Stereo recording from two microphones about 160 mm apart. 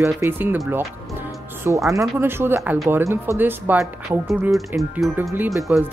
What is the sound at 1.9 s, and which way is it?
Speech, 15° right (ahead or behind).